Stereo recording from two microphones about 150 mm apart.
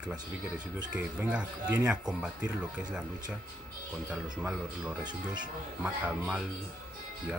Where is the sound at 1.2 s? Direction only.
10° right (ahead or behind).